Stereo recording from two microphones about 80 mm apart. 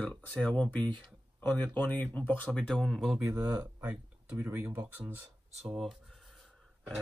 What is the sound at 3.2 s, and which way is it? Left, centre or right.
Speech, right.